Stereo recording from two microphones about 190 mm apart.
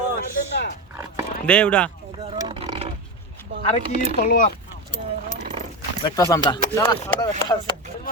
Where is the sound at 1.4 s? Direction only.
5° left (ahead or behind).